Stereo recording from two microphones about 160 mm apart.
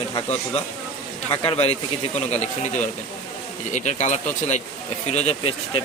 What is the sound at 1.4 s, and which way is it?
Speech, 35° left (ahead or behind).